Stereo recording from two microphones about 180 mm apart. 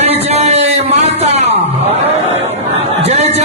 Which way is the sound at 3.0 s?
35° right (ahead or behind).